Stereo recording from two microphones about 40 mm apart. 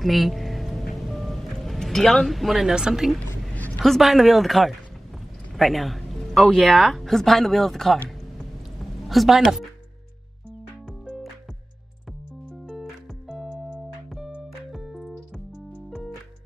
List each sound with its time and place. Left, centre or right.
0.0 s music: centre
2.7 s speech: centre
3.5 s a sound: left
3.8 s a man's voice: centre
13.3 s music: centre
14.7 s music: centre